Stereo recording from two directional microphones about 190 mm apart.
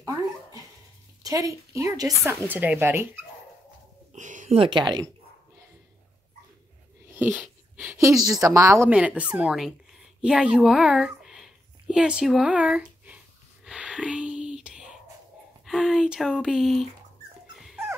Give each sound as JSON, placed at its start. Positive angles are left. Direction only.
{"t": 0.0, "sound": "a sound", "side_deg": -20}
{"t": 1.2, "sound": "a woman's voice", "side_deg": -15}
{"t": 4.1, "sound": "speech", "side_deg": -40}
{"t": 7.2, "sound": "speech", "side_deg": -5}
{"t": 13.7, "sound": "whispering", "side_deg": -5}
{"t": 15.6, "sound": "speech", "side_deg": 0}
{"t": 17.6, "sound": "dog", "side_deg": -5}